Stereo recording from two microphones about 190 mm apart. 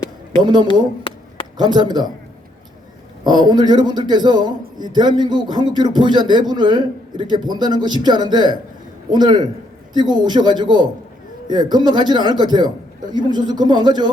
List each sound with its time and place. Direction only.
0.4 s a man's voice: 20° right (ahead or behind)
1.1 s a sound: 30° left (ahead or behind)
1.5 s a man's voice: 20° right (ahead or behind)
3.2 s a man's voice: 20° right (ahead or behind)